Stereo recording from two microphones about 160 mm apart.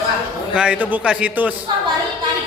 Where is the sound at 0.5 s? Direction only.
5° right (ahead or behind).